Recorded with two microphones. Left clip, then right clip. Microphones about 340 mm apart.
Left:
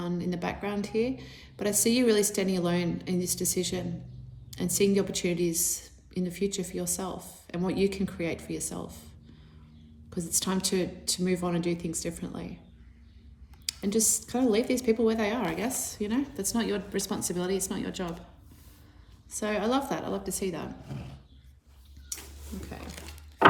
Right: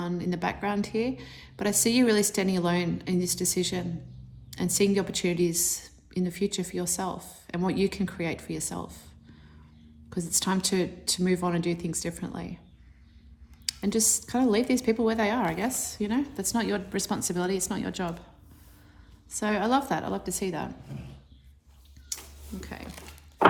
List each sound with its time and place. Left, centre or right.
0.0 s a woman's voice: right
10.1 s a woman's voice: right
13.7 s a woman's voice: right
19.3 s a woman's voice: right